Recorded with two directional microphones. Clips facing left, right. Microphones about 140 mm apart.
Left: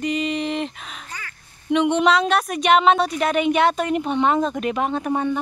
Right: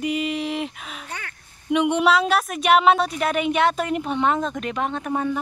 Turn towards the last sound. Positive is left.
turn(degrees=0)  # may be behind; listen again after turning